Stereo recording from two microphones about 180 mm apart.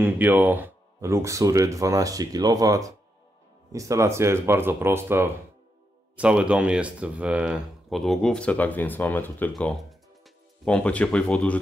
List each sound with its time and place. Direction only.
0.0 s speech: 10° right (ahead or behind); by 11.5 s 5° left (ahead or behind)